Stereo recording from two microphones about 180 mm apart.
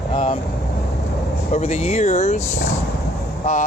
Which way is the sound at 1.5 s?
40° left (ahead or behind).